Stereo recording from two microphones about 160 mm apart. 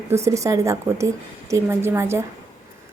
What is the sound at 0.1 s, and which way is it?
A woman's voice, 20° right (ahead or behind).